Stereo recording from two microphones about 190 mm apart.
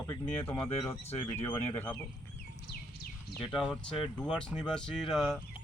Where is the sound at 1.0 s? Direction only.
30° left (ahead or behind).